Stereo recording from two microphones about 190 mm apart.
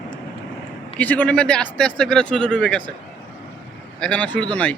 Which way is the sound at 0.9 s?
5° left (ahead or behind).